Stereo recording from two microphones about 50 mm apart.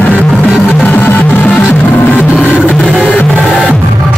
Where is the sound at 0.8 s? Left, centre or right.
Left.